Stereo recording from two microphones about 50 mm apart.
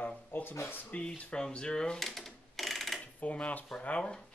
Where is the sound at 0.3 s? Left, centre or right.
Left.